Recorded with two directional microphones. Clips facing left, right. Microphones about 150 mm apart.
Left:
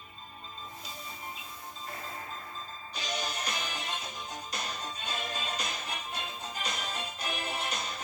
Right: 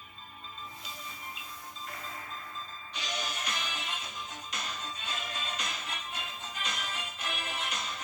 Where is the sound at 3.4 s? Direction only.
35° left (ahead or behind).